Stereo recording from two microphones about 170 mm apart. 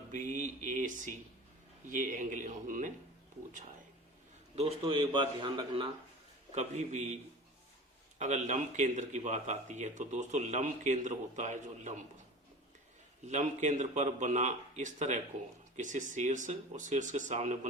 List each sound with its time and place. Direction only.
0.1 s speech: 45° right (ahead or behind)
4.5 s a man's voice: 35° right (ahead or behind)
6.5 s speech: 45° right (ahead or behind)
8.2 s speech: 45° right (ahead or behind)
13.2 s speech: 45° right (ahead or behind)